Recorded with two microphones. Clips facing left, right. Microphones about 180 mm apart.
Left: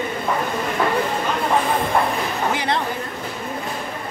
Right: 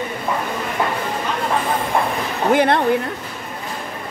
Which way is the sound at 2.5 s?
55° right (ahead or behind).